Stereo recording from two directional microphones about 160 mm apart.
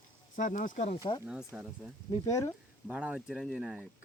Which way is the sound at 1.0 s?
25° left (ahead or behind).